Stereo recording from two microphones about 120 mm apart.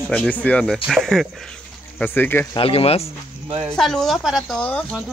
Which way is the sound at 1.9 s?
15° left (ahead or behind).